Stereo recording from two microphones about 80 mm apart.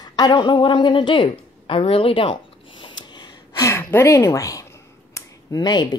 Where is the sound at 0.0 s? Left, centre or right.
Left.